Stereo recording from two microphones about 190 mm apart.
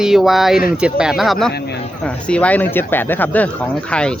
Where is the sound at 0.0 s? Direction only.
Centre (ahead or behind).